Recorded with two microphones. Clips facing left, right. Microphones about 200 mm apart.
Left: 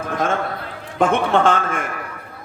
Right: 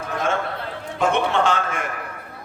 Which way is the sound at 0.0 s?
50° left (ahead or behind).